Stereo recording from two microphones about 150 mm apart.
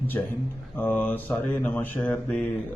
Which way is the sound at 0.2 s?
20° left (ahead or behind).